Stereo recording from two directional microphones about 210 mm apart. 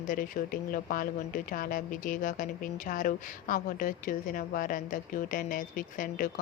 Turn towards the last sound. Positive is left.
turn(degrees=40)  # may be behind; listen again after turning